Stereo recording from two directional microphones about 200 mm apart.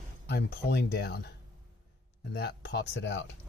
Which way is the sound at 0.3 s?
55° left (ahead or behind).